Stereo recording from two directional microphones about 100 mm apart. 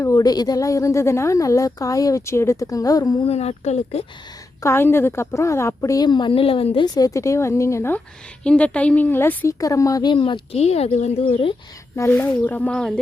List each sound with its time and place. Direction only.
0.0 s speech: 35° left (ahead or behind)
3.2 s speech: 90° left
4.6 s a woman's voice: 25° left (ahead or behind)
6.1 s a woman's voice: 50° left (ahead or behind); by 6.8 s 70° left (ahead or behind)
6.8 s speech: 40° left (ahead or behind)
8.4 s a woman's voice: 10° left (ahead or behind)
9.6 s speech: 35° left (ahead or behind)
10.1 s speech: 55° left (ahead or behind); by 11.5 s 70° left (ahead or behind)
11.9 s a woman's voice: 25° left (ahead or behind)